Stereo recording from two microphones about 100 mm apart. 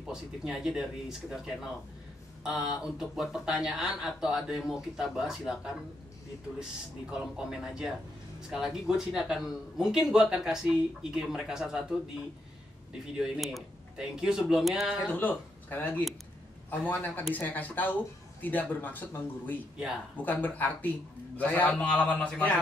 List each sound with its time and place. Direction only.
0.0 s speech: 5° right (ahead or behind)
7.1 s speech: 5° right (ahead or behind)
13.0 s speech: 5° right (ahead or behind)
15.0 s speech: 15° left (ahead or behind)